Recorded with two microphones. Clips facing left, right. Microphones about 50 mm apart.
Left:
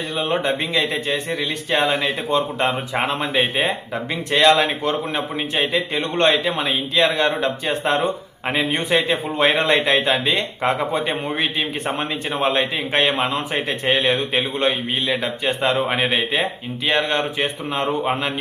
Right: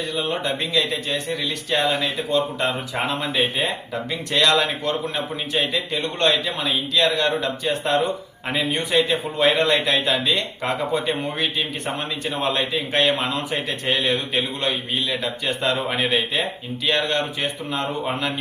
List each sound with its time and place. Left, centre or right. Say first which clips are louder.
0.2 s a man's voice: left 5 dB; left